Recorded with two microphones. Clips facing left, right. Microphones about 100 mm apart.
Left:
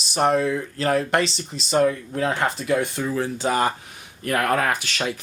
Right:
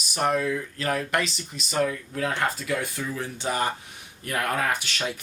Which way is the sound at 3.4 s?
90° left.